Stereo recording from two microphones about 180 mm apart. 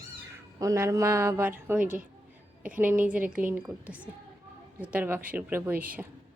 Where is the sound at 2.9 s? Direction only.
10° right (ahead or behind).